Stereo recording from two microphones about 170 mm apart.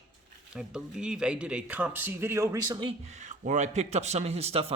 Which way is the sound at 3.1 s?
45° right (ahead or behind).